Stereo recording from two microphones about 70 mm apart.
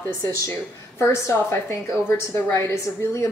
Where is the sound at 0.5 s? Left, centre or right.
Left.